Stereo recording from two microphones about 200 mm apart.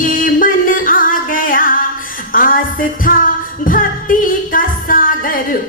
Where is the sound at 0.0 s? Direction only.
40° left (ahead or behind).